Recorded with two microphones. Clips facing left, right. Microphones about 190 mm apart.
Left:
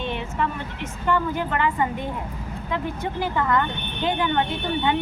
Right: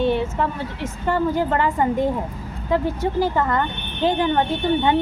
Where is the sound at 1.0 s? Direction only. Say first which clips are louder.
Right 3 dB; 40° right (ahead or behind).